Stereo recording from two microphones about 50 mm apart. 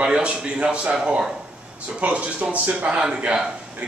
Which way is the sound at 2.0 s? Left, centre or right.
Right.